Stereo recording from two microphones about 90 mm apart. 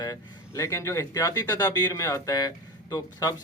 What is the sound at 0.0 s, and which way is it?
A man's voice, 40° left (ahead or behind).